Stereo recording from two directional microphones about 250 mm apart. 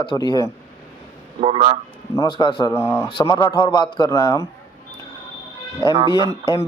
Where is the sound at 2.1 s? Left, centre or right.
Centre.